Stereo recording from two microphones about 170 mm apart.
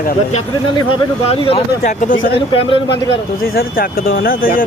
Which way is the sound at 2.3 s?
30° left (ahead or behind).